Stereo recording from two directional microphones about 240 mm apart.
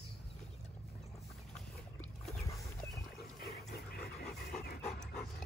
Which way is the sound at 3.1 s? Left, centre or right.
Left.